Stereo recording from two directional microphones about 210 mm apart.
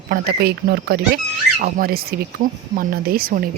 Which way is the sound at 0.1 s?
45° right (ahead or behind).